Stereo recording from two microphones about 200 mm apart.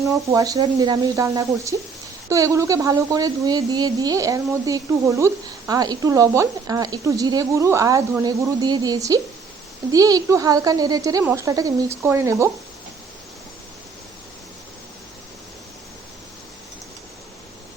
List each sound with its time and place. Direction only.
0.0 s speech: 15° right (ahead or behind)